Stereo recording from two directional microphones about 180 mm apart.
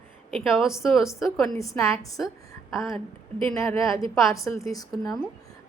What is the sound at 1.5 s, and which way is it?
Speech, 15° left (ahead or behind).